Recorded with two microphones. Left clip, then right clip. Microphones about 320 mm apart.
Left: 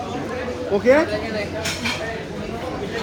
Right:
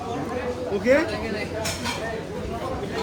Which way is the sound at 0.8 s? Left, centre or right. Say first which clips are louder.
Left 4 dB; centre.